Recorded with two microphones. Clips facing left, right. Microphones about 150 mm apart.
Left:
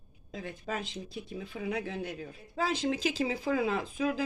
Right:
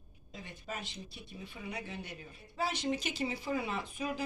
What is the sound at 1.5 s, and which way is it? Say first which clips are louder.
Speech: left 9 dB; 75° left (ahead or behind).